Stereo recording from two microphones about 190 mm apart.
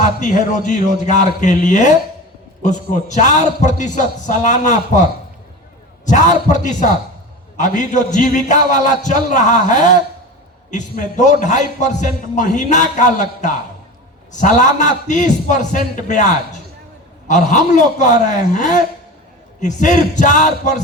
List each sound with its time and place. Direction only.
0.0 s a man's voice: 45° left (ahead or behind)
6.1 s a man's voice: 40° left (ahead or behind)
17.2 s a man's voice: 40° left (ahead or behind)